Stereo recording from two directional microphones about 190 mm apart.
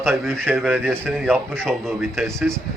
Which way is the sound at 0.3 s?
Centre (ahead or behind).